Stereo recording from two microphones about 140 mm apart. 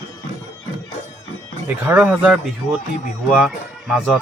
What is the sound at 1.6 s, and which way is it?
Speech, 15° right (ahead or behind).